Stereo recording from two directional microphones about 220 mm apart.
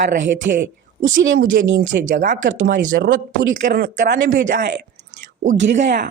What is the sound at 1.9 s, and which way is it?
Speech, 35° right (ahead or behind).